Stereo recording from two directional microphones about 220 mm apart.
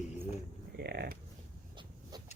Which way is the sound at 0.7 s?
45° right (ahead or behind).